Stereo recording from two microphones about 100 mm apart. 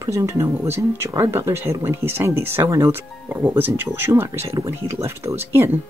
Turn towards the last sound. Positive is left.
turn(degrees=-25)  # may be behind; listen again after turning